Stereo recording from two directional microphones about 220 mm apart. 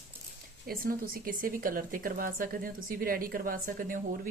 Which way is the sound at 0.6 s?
40° right (ahead or behind).